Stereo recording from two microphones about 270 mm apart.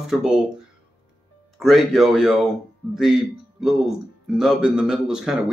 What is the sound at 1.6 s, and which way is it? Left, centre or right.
Speech, centre.